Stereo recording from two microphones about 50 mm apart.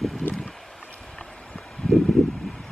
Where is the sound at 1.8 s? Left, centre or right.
Centre.